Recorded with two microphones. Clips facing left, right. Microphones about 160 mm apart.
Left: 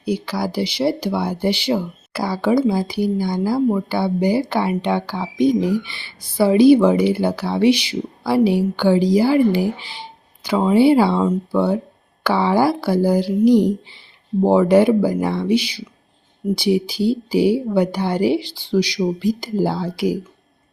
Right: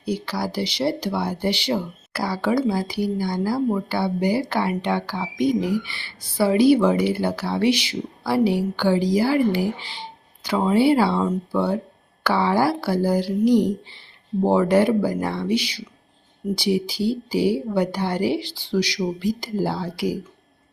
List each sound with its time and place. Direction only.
0.0 s speech: 10° left (ahead or behind)